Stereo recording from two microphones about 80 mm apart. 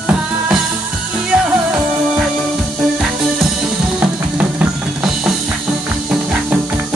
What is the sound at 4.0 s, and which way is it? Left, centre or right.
Music, centre.